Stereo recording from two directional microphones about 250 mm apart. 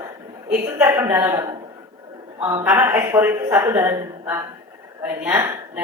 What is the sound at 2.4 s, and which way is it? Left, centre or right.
A woman's voice, centre.